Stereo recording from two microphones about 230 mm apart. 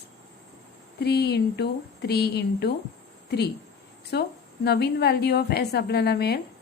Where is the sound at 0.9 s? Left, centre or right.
Left.